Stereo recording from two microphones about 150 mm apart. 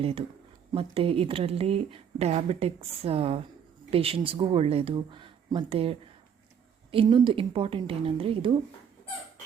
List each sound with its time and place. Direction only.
0.0 s speech: 40° right (ahead or behind)